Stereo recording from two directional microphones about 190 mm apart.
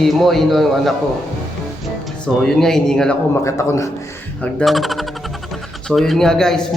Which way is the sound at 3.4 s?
15° left (ahead or behind).